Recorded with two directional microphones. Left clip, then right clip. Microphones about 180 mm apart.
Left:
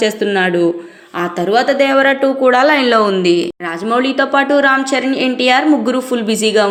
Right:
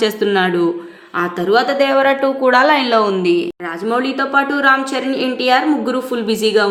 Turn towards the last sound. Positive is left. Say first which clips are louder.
# left 1 dB
turn(degrees=15)  # may be behind; listen again after turning